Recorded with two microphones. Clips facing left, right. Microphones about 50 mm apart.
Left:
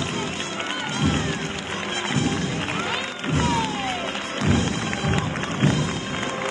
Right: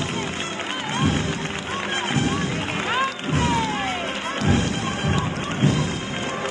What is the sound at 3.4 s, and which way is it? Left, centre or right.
Roaring cats, right.